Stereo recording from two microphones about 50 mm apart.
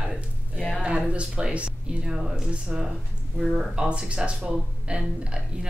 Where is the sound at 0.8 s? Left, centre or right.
Right.